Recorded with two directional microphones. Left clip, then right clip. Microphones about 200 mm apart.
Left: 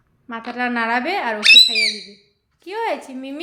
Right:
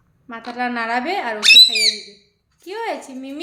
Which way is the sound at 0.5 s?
15° left (ahead or behind).